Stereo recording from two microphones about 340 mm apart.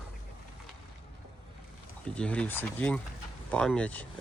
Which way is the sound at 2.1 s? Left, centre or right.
Centre.